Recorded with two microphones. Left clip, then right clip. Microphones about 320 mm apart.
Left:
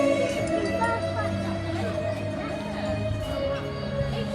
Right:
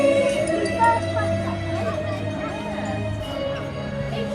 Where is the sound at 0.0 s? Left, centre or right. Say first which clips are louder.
Right 5 dB; left.